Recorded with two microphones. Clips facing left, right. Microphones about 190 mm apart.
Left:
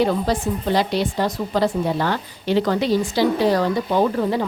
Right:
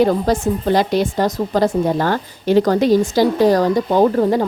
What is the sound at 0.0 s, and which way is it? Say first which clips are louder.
A woman's voice: right 4 dB; 45° right (ahead or behind).